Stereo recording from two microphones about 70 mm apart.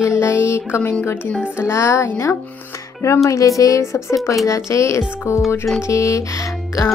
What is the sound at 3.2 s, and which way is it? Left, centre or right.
Speech, left.